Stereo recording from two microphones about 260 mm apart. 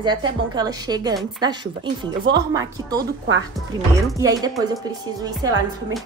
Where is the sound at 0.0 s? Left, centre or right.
Centre.